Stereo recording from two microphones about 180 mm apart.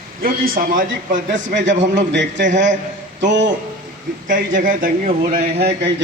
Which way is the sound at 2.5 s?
45° right (ahead or behind).